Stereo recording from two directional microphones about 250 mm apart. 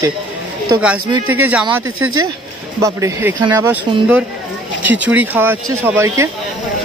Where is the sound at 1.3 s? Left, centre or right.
Centre.